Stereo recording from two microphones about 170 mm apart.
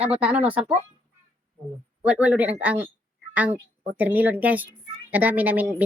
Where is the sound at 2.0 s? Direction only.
10° right (ahead or behind).